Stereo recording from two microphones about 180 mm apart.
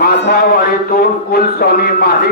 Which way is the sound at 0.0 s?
60° left (ahead or behind).